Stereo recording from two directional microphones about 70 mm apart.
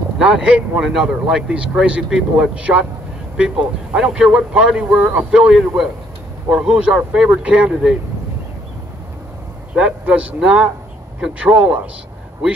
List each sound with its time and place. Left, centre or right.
0.2 s speech: centre
9.8 s speech: centre